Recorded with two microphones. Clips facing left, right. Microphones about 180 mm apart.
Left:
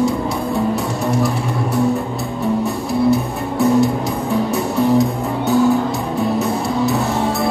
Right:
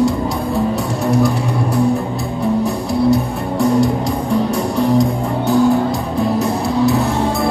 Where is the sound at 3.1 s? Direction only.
Centre (ahead or behind).